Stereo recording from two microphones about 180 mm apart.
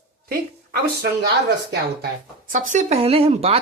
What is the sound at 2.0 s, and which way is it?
Speech, 50° right (ahead or behind).